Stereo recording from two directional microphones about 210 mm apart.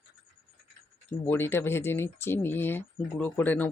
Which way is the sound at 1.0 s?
10° left (ahead or behind).